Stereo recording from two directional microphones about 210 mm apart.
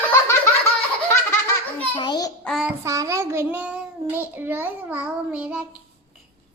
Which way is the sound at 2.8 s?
15° right (ahead or behind).